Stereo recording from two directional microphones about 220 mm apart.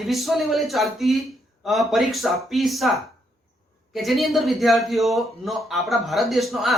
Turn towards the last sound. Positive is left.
turn(degrees=0)  # may be behind; listen again after turning